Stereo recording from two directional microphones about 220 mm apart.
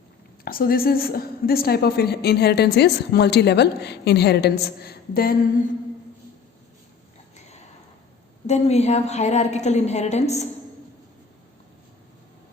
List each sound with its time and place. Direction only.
0.4 s a woman's voice: 40° left (ahead or behind)
8.4 s a woman's voice: 30° left (ahead or behind)